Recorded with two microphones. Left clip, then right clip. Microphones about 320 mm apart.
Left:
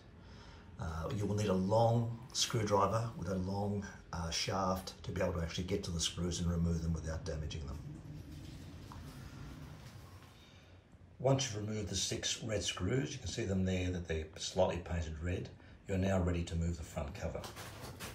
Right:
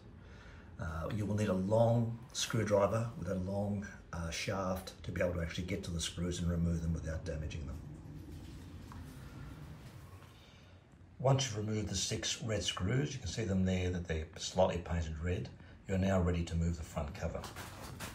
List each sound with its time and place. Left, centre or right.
0.7 s speech: centre
11.2 s speech: centre